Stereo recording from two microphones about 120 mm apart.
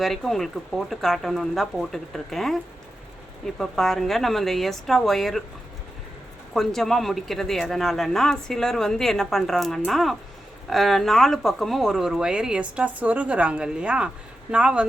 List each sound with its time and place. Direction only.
0.0 s speech: centre (ahead or behind)
6.5 s speech: centre (ahead or behind)